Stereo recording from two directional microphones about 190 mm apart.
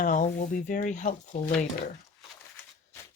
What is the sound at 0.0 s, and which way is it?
Speech, 40° left (ahead or behind).